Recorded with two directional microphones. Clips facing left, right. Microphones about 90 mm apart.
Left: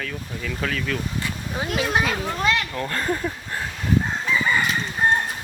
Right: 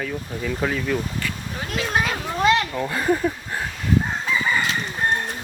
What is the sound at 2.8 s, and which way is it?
Speech, 10° right (ahead or behind).